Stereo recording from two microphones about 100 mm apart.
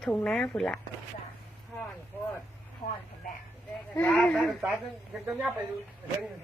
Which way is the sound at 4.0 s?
10° left (ahead or behind).